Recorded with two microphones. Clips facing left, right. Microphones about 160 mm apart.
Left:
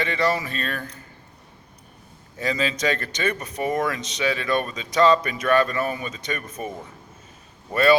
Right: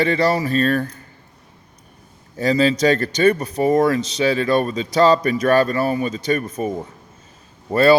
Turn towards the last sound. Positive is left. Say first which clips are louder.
# right 5 dB
turn(degrees=-35)  # may be behind; listen again after turning